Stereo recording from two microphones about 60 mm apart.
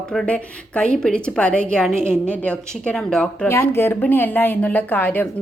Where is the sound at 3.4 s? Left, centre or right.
Left.